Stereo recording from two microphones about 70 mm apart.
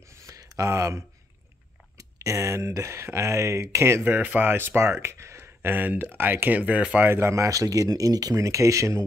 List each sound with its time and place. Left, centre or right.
0.1 s a sound: right
2.0 s speech: right; by 7.1 s centre
7.1 s speech: right